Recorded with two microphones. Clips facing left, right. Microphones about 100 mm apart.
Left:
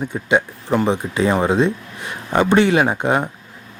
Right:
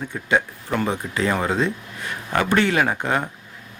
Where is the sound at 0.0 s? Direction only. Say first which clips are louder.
Left 3 dB; 20° left (ahead or behind).